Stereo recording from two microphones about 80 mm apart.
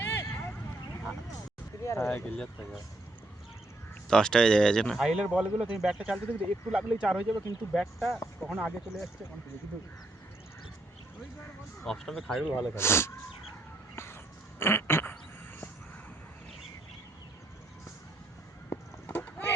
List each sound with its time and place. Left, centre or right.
0.0 s vehicle: left
1.8 s speech: left
2.1 s speech: centre
4.1 s speech: centre
4.9 s speech: centre
6.1 s speech: left
6.7 s speech: centre
7.7 s speech: centre
11.9 s speech: centre
12.5 s speech: left
12.7 s speech: left
13.9 s music: left
14.6 s duck: left
18.7 s a sound: left